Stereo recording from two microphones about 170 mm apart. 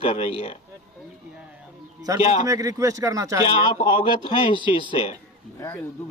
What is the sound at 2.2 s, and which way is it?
Speech, 35° left (ahead or behind).